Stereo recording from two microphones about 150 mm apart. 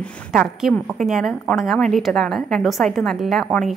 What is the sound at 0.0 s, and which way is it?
A woman's voice, centre (ahead or behind).